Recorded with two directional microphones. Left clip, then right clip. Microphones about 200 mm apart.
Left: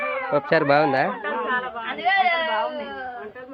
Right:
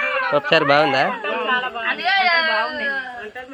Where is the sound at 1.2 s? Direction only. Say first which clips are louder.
Right 4 dB; 15° right (ahead or behind).